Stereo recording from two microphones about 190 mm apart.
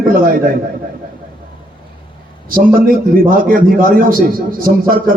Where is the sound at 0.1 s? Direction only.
50° right (ahead or behind).